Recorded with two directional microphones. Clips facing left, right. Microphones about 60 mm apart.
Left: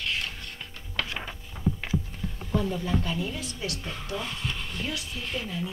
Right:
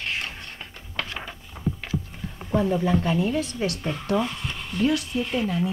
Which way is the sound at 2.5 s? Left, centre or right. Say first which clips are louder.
Right 6 dB; right.